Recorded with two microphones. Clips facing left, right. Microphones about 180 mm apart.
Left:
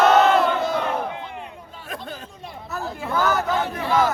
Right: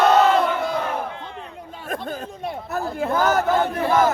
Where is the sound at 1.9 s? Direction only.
50° right (ahead or behind).